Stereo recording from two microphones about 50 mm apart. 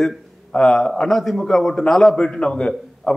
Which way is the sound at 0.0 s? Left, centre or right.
Centre.